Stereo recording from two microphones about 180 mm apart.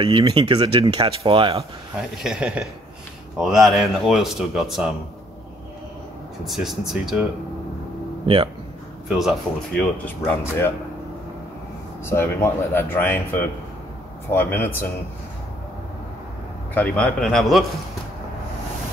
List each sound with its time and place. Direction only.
0.0 s speech: 30° right (ahead or behind)
1.6 s speech: 5° right (ahead or behind)
6.4 s speech: centre (ahead or behind)
8.3 s speech: 30° right (ahead or behind)
9.8 s speech: 10° left (ahead or behind)
12.1 s speech: 15° left (ahead or behind)
16.7 s speech: 10° left (ahead or behind)